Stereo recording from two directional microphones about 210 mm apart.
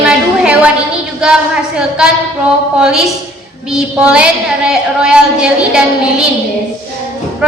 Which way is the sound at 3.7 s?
5° right (ahead or behind).